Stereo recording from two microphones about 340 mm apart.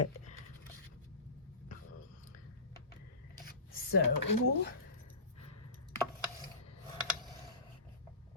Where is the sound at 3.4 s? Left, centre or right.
Left.